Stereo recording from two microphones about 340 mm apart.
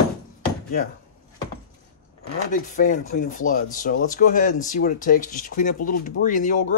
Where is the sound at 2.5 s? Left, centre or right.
Left.